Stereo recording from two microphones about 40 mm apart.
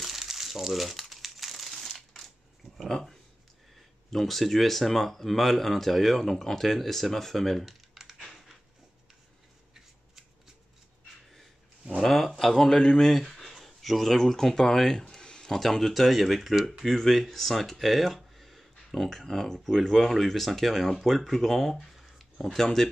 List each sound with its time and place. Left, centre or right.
0.0 s crumpling: centre
1.8 s crushing: centre
2.8 s speech: centre
12.0 s a sound: centre
12.4 s speech: centre
15.6 s speech: centre